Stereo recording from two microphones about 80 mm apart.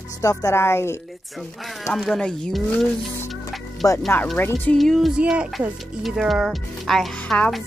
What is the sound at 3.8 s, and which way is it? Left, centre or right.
Speech, left.